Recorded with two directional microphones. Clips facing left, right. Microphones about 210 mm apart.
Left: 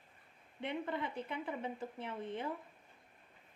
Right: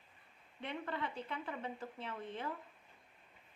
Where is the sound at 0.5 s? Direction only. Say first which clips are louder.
Left 3 dB; 20° left (ahead or behind).